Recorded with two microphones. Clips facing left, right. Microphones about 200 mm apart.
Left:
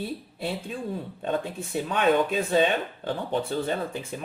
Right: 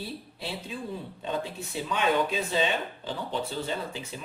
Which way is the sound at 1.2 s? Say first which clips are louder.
Left 4 dB; 50° left (ahead or behind).